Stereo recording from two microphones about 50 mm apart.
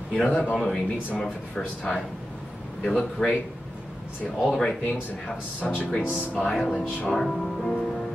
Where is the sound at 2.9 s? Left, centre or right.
Centre.